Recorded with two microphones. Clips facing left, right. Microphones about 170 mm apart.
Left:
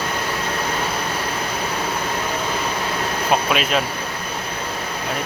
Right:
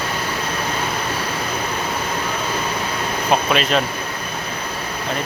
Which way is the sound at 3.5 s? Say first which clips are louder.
Right 2 dB; 5° left (ahead or behind).